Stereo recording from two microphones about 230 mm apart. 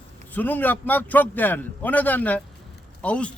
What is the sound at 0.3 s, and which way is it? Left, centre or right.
A man's voice, centre.